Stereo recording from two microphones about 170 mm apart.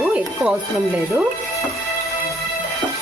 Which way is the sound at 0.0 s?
5° right (ahead or behind).